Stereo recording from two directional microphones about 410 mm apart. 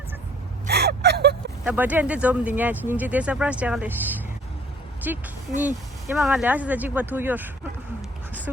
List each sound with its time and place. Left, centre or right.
0.7 s gasp: right
1.6 s speech: centre